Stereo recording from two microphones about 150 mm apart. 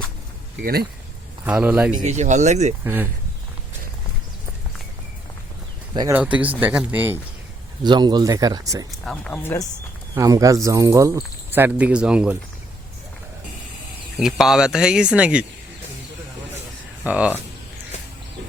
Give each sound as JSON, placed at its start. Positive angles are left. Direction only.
{"t": 0.6, "sound": "speech", "side_deg": -90}
{"t": 1.5, "sound": "speech", "side_deg": -10}
{"t": 2.0, "sound": "speech", "side_deg": -50}
{"t": 2.8, "sound": "speech", "side_deg": -15}
{"t": 5.9, "sound": "speech", "side_deg": -25}
{"t": 6.1, "sound": "speech", "side_deg": -10}
{"t": 7.9, "sound": "speech", "side_deg": -30}
{"t": 8.9, "sound": "speech", "side_deg": 0}
{"t": 9.3, "sound": "speech", "side_deg": 15}
{"t": 10.2, "sound": "speech", "side_deg": -25}
{"t": 14.2, "sound": "speech", "side_deg": 0}
{"t": 17.0, "sound": "speech", "side_deg": -10}